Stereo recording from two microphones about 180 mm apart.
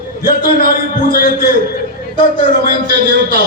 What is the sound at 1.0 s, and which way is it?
Speech, 55° left (ahead or behind).